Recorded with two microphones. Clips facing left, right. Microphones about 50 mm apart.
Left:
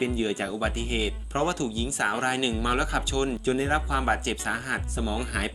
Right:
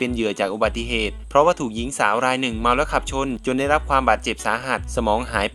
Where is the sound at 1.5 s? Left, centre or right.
Right.